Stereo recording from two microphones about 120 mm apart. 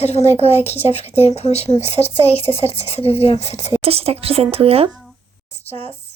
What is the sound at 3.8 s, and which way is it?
A woman's voice, 55° right (ahead or behind).